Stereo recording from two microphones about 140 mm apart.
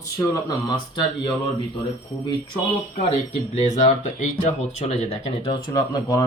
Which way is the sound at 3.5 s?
55° left (ahead or behind).